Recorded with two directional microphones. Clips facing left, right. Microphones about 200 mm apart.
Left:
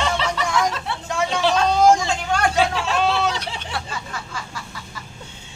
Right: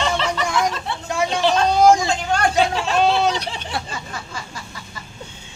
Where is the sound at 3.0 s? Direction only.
15° right (ahead or behind).